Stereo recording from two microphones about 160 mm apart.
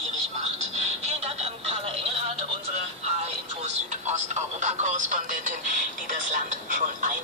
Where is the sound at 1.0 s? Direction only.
40° right (ahead or behind).